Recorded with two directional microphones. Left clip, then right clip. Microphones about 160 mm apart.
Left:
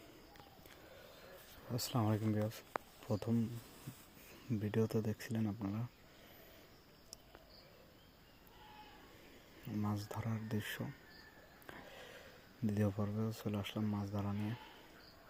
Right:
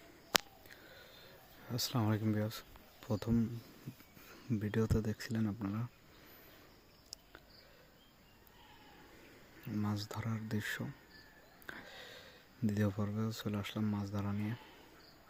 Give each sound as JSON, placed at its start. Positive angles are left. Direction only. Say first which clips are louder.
{"t": 1.6, "sound": "speech", "louder": "right 2 dB", "side_deg": -20}
{"t": 9.6, "sound": "speech", "louder": "right 2 dB", "side_deg": -25}
{"t": 11.6, "sound": "wheeze", "louder": "right 4 dB", "side_deg": -25}
{"t": 12.6, "sound": "speech", "louder": "right 1 dB", "side_deg": -20}